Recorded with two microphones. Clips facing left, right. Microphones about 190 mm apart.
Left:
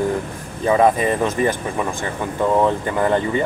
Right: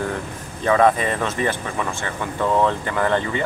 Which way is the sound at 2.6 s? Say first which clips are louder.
Left 2 dB; 15° left (ahead or behind).